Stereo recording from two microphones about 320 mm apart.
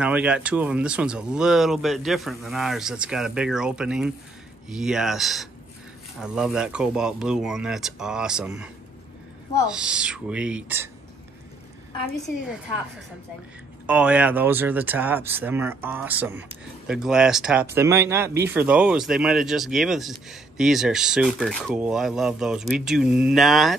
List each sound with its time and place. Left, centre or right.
0.0 s speech: centre
9.7 s speech: centre
13.8 s speech: centre